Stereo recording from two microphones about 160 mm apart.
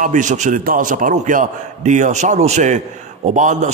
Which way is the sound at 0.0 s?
50° right (ahead or behind).